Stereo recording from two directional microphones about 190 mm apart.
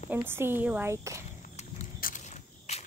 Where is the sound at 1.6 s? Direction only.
40° left (ahead or behind).